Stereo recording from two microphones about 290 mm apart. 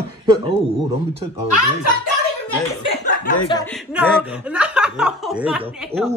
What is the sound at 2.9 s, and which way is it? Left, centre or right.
Chuckle, left.